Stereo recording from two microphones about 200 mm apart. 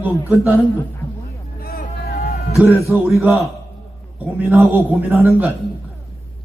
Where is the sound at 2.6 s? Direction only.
10° right (ahead or behind).